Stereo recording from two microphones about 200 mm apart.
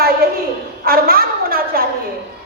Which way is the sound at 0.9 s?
45° right (ahead or behind).